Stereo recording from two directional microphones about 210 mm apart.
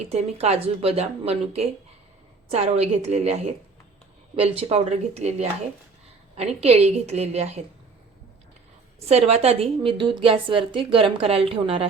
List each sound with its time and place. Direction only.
0.0 s a woman's voice: 30° right (ahead or behind)
9.0 s a woman's voice: 30° right (ahead or behind)